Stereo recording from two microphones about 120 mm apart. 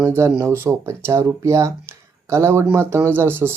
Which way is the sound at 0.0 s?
20° right (ahead or behind).